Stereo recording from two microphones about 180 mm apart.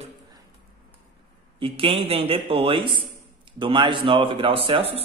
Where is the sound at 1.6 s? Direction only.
30° right (ahead or behind).